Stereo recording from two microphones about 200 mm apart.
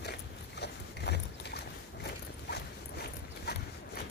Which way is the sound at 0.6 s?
55° left (ahead or behind).